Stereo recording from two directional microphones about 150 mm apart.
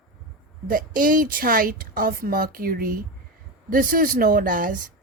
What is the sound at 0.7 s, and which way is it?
A woman's voice, 70° right (ahead or behind).